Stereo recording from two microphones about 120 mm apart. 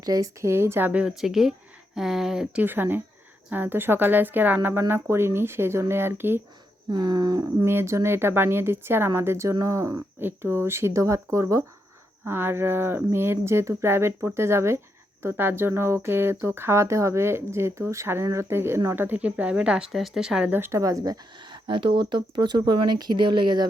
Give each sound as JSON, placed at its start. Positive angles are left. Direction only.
{"t": 0.0, "sound": "a woman's voice", "side_deg": -30}
{"t": 6.9, "sound": "a sound", "side_deg": -35}
{"t": 7.6, "sound": "a woman's voice", "side_deg": -20}